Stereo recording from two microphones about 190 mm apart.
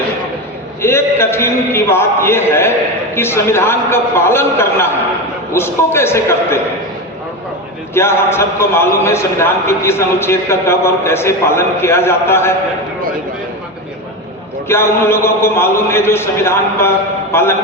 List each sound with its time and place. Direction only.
0.8 s a man's voice: 15° left (ahead or behind)
7.9 s a man's voice: 15° left (ahead or behind)
14.7 s a man's voice: 15° left (ahead or behind)